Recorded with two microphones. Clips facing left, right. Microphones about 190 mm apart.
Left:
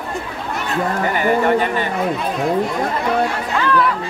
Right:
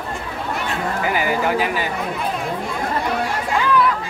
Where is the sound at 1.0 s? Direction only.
5° right (ahead or behind).